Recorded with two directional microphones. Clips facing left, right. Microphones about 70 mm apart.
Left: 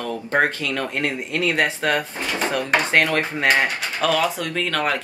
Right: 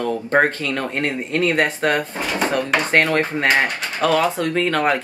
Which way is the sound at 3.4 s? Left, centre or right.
Centre.